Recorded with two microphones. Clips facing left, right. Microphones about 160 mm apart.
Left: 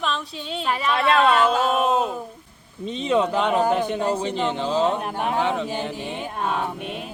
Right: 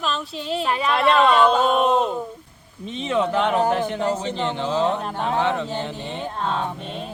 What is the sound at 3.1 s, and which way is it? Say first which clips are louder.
A man's voice: right 1 dB; 15° left (ahead or behind).